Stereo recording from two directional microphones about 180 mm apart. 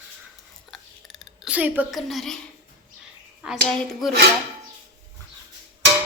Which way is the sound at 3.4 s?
5° right (ahead or behind).